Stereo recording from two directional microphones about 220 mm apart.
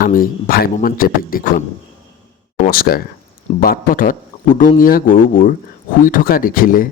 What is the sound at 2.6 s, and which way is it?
Speech, 45° left (ahead or behind).